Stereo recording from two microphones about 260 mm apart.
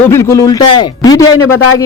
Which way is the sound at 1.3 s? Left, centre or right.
Left.